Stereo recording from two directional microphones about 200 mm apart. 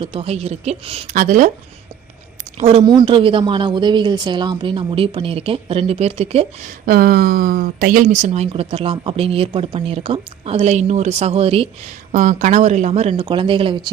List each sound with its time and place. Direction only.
0.0 s speech: 25° right (ahead or behind)
1.1 s a woman's voice: 40° right (ahead or behind)
2.6 s speech: 30° right (ahead or behind)
6.8 s a woman's voice: 50° right (ahead or behind); by 11.7 s 30° right (ahead or behind)
12.1 s a woman's voice: 40° right (ahead or behind)